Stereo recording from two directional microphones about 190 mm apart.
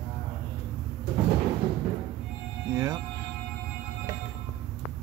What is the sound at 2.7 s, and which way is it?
Music, 15° right (ahead or behind).